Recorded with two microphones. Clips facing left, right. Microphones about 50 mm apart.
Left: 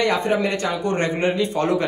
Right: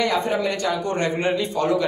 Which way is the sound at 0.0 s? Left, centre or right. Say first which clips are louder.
Left 2 dB; left.